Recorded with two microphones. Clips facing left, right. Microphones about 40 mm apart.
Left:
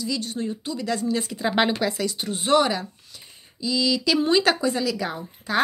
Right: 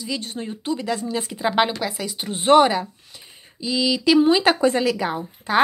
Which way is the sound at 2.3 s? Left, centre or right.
Right.